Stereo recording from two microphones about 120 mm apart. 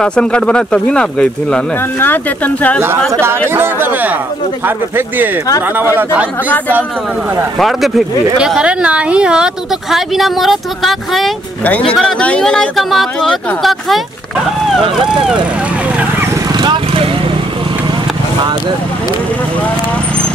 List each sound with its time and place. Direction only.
0.0 s speech: 10° left (ahead or behind)
3.1 s speech: 20° right (ahead or behind)
7.5 s speech: centre (ahead or behind)
16.5 s vehicle: 40° right (ahead or behind)